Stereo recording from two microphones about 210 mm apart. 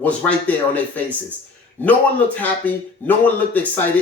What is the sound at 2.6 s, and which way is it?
A man's voice, 10° left (ahead or behind).